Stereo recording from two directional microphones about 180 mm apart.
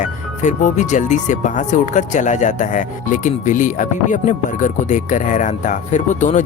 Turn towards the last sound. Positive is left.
turn(degrees=40)  # may be behind; listen again after turning